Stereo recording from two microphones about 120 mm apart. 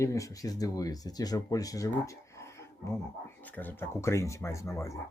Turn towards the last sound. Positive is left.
turn(degrees=25)  # may be behind; listen again after turning